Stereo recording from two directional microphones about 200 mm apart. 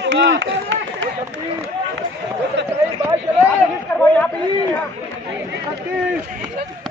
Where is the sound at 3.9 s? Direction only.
15° left (ahead or behind).